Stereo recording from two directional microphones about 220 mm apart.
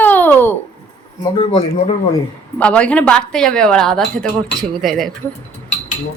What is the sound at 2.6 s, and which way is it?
Speech, 5° left (ahead or behind).